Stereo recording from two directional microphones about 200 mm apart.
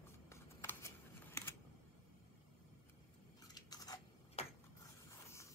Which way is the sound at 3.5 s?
20° left (ahead or behind).